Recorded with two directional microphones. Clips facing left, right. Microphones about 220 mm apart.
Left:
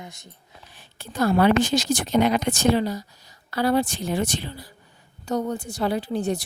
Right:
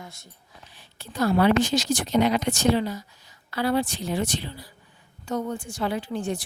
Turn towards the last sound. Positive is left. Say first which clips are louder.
# left 3 dB
turn(degrees=40)  # may be behind; listen again after turning